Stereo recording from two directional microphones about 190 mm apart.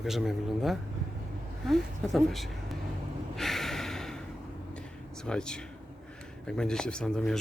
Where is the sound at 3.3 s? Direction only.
Centre (ahead or behind).